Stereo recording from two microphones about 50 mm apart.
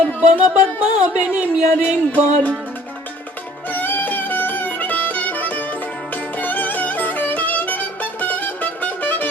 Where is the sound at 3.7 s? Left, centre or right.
Left.